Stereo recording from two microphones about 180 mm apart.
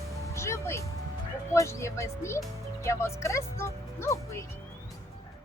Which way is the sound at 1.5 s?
15° left (ahead or behind).